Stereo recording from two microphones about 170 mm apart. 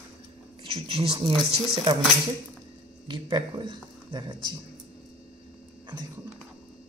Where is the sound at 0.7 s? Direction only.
35° right (ahead or behind).